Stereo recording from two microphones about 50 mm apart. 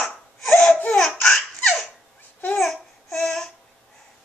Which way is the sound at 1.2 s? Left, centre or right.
Centre.